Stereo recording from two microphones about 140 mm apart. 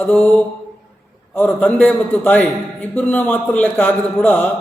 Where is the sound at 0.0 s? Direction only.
10° left (ahead or behind).